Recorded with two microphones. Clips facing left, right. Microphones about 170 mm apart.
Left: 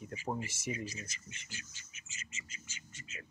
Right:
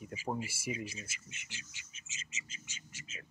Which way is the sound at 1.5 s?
85° right.